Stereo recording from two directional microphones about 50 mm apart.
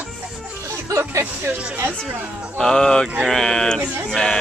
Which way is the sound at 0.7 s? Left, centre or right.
Right.